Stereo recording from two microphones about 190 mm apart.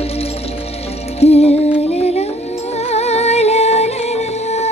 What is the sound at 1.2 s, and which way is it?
Music, 35° left (ahead or behind).